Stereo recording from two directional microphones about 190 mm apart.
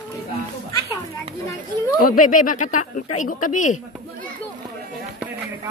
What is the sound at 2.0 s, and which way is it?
A woman's voice, 45° left (ahead or behind).